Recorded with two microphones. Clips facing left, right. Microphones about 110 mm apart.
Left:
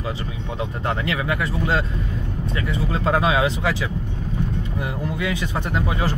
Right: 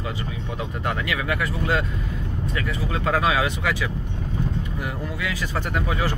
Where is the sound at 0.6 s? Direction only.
25° left (ahead or behind).